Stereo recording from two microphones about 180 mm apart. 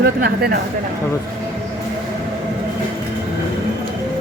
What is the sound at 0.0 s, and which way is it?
Speech, 60° right (ahead or behind).